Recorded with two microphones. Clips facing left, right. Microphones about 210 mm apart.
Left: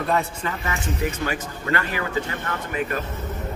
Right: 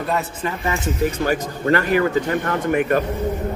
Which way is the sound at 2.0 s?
45° right (ahead or behind).